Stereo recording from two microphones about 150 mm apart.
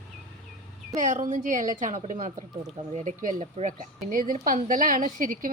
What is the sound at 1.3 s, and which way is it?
A woman's voice, 55° right (ahead or behind).